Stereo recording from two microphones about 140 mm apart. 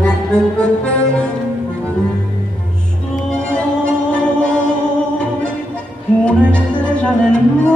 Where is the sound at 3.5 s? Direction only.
10° left (ahead or behind).